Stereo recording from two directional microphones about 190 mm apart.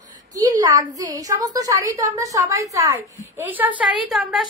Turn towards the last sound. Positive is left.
turn(degrees=0)  # may be behind; listen again after turning